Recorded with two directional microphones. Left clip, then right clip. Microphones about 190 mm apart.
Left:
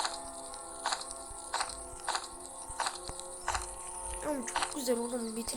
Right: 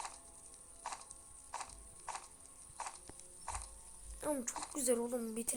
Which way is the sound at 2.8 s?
45° left (ahead or behind).